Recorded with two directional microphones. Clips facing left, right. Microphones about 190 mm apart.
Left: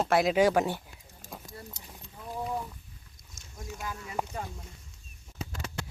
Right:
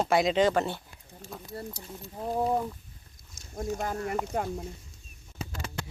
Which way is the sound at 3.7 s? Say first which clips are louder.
Right 9 dB; 50° right (ahead or behind).